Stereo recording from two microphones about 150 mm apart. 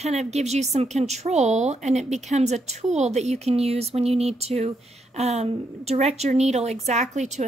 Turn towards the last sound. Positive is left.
turn(degrees=-50)  # may be behind; listen again after turning